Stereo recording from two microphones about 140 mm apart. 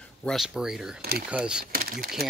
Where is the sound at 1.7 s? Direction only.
90° right.